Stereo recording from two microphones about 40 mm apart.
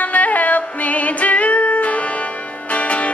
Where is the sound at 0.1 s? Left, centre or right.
Left.